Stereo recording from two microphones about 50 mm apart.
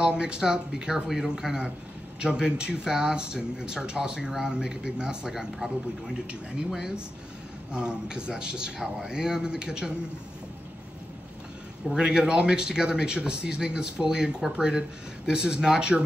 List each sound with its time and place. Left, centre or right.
0.0 s a man's voice: centre
11.9 s a man's voice: centre